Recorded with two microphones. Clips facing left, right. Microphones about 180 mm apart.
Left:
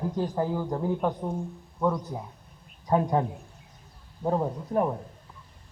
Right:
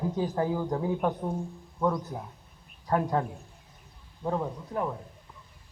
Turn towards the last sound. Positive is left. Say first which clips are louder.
# left 5 dB
turn(degrees=35)  # may be behind; listen again after turning